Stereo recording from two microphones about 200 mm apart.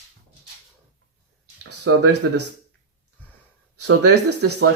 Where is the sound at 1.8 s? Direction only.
60° right (ahead or behind).